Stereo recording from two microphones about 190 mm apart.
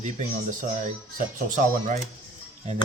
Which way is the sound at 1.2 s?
45° right (ahead or behind).